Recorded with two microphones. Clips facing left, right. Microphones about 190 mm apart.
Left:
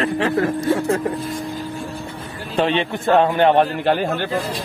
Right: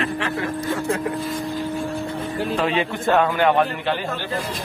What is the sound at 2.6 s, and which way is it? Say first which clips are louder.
A man's voice: left 7 dB; 30° left (ahead or behind).